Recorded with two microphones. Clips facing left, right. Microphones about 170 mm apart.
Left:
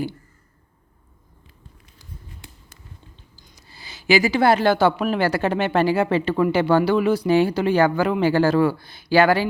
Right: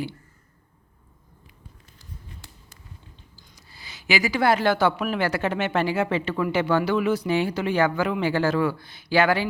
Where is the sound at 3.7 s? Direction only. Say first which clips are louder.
Left 7 dB; 30° left (ahead or behind).